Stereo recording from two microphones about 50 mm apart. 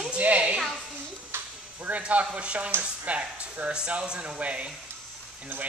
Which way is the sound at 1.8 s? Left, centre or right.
Right.